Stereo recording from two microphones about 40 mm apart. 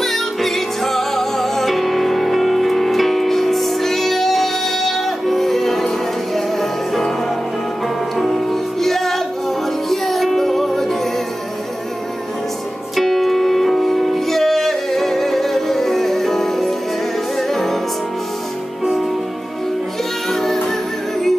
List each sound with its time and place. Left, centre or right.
0.0 s music: centre
8.2 s music: centre
12.9 s music: centre
20.2 s music: centre